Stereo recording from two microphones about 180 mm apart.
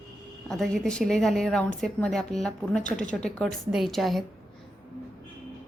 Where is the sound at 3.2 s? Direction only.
5° left (ahead or behind).